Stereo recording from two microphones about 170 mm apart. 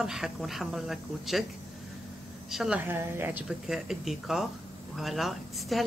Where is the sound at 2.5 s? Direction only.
5° right (ahead or behind).